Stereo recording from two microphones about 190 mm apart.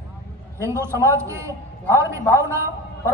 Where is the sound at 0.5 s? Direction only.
15° right (ahead or behind).